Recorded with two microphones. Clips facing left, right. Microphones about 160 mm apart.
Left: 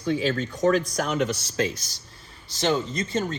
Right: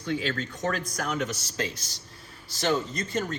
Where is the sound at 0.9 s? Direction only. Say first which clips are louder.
Left 5 dB; 70° left (ahead or behind).